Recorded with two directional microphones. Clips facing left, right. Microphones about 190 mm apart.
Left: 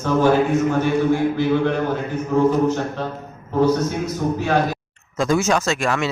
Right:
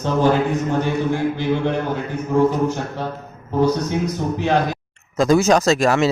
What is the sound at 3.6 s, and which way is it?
Speech, 15° right (ahead or behind).